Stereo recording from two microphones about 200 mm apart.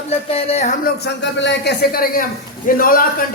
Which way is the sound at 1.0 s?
60° left (ahead or behind).